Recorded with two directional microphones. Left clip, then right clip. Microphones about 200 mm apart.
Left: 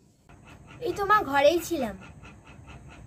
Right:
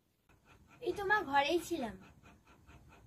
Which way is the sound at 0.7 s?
20° left (ahead or behind).